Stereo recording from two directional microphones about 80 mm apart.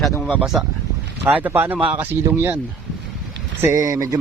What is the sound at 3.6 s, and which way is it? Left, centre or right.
Speech, right.